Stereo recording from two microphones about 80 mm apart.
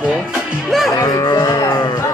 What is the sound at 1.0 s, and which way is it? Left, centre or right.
Livestock, left.